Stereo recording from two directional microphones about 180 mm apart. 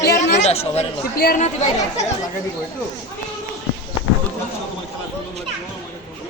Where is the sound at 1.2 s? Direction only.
45° left (ahead or behind).